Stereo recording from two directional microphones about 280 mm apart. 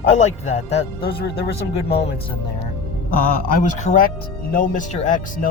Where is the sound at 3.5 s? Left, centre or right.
Left.